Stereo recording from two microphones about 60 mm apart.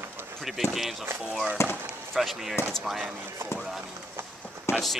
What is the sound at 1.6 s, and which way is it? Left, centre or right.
Speech, left.